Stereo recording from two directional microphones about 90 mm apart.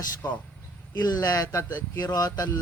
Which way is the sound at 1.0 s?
45° left (ahead or behind).